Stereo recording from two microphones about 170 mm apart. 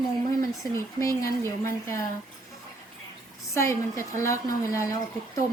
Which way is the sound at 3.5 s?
15° left (ahead or behind).